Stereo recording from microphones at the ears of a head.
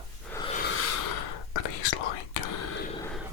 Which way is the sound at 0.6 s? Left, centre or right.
Left.